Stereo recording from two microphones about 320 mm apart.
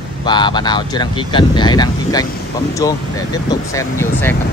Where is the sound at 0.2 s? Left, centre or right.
Centre.